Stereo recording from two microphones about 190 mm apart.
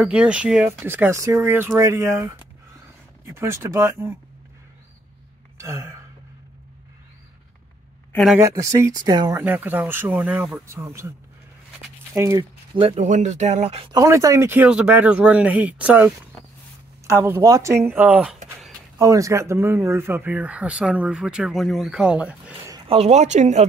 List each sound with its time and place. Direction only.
0.0 s speech: 5° right (ahead or behind)
5.6 s gasp: 15° right (ahead or behind)
8.1 s speech: centre (ahead or behind)
8.4 s speech: 15° right (ahead or behind)
9.4 s speech: 10° right (ahead or behind)
11.8 s a sound: 15° right (ahead or behind)
12.7 s speech: 30° right (ahead or behind)
13.9 s speech: 15° right (ahead or behind)
18.7 s speech: 15° right (ahead or behind)
22.7 s speech: 25° right (ahead or behind)